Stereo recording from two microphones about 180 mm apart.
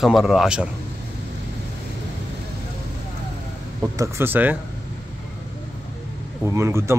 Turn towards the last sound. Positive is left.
turn(degrees=-15)  # may be behind; listen again after turning